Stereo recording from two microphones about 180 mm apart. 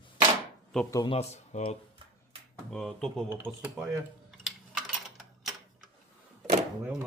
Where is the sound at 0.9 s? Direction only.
20° left (ahead or behind).